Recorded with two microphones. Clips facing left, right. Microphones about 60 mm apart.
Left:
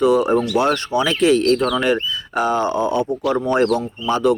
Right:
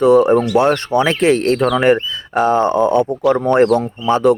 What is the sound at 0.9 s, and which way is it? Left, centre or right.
Speech, right.